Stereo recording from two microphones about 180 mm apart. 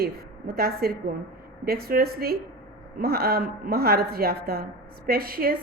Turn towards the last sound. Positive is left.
turn(degrees=-55)  # may be behind; listen again after turning